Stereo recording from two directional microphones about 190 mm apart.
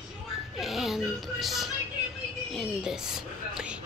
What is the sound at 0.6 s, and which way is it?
A woman's voice, centre (ahead or behind).